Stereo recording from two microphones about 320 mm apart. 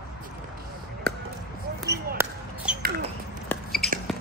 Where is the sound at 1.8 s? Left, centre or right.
Centre.